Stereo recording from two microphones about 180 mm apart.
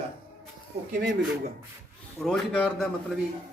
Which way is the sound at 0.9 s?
55° right (ahead or behind).